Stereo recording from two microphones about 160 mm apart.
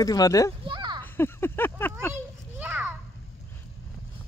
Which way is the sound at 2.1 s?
10° right (ahead or behind).